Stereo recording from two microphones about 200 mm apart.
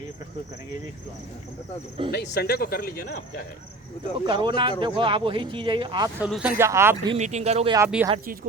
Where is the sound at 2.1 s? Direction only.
55° left (ahead or behind).